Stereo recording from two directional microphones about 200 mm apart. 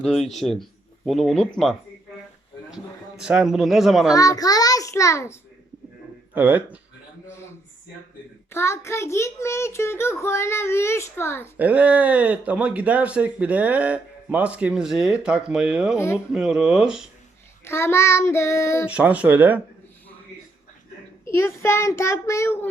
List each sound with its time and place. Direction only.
0.0 s speech: centre (ahead or behind)
3.2 s speech: 5° right (ahead or behind)
4.1 s a child's voice: 15° left (ahead or behind)
6.3 s speech: 10° right (ahead or behind)
8.4 s a child's voice: 15° left (ahead or behind)
11.5 s speech: 5° right (ahead or behind)
17.7 s a child's voice: 10° left (ahead or behind)
18.9 s speech: 5° right (ahead or behind)
21.2 s a child's voice: 15° left (ahead or behind)